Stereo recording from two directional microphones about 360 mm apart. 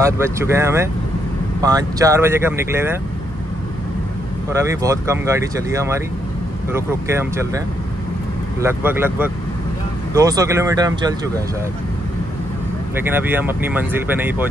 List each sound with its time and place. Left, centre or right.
0.0 s speech: centre
4.5 s speech: centre
12.9 s speech: centre